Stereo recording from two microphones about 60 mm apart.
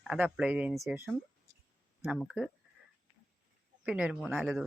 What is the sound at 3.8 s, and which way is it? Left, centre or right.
Speech, centre.